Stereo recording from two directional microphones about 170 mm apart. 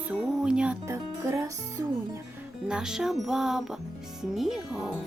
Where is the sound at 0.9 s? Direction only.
15° right (ahead or behind).